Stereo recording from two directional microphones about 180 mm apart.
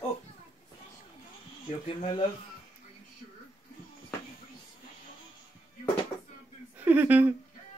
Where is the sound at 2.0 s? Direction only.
30° left (ahead or behind).